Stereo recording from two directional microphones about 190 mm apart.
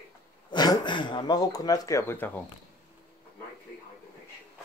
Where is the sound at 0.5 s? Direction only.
20° left (ahead or behind).